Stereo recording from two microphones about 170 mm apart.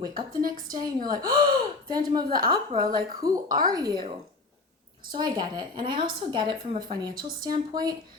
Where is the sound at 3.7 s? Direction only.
25° right (ahead or behind).